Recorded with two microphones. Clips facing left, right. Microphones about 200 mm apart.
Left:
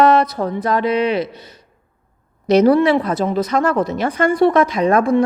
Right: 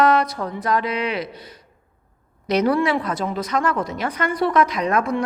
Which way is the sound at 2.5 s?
30° left (ahead or behind).